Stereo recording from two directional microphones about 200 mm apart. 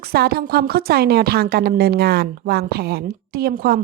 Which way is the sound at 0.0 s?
50° right (ahead or behind).